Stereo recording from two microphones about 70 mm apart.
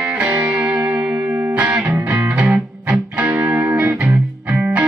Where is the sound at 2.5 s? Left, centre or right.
Centre.